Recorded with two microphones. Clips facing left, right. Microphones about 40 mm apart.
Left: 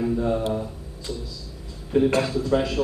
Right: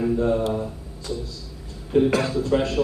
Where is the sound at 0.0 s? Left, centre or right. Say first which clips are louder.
Right 2 dB; centre.